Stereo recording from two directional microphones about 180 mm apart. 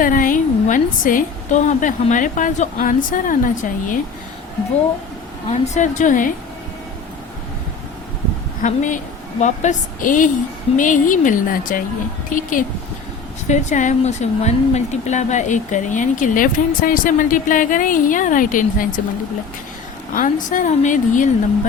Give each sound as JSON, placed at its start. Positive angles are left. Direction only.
{"t": 0.0, "sound": "speech", "side_deg": 50}
{"t": 5.5, "sound": "speech", "side_deg": 40}
{"t": 8.6, "sound": "speech", "side_deg": 45}
{"t": 20.1, "sound": "speech", "side_deg": 45}